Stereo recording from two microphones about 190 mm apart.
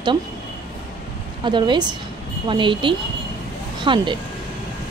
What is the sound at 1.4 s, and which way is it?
Speech, 25° right (ahead or behind).